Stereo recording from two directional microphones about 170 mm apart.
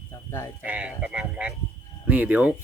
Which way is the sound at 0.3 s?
15° left (ahead or behind).